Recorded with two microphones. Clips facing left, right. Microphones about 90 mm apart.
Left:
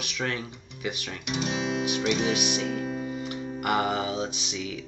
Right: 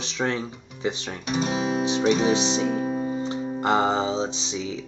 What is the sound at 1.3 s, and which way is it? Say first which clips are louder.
Music: right 4 dB; 35° right (ahead or behind).